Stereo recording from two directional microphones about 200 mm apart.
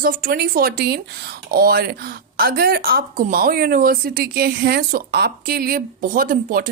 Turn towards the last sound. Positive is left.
turn(degrees=-45)  # may be behind; listen again after turning